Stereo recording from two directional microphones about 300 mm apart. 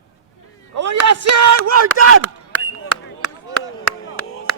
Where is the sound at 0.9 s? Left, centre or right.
Right.